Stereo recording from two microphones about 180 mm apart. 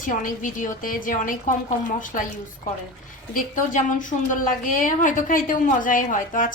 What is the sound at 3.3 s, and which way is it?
A woman's voice, 45° left (ahead or behind).